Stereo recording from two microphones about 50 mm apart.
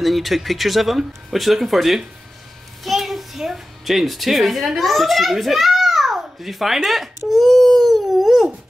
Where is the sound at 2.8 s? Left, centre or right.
Centre.